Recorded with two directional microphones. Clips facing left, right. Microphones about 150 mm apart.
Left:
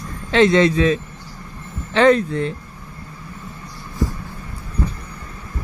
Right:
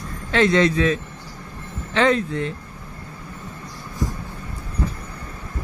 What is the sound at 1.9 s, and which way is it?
Speech, 30° left (ahead or behind).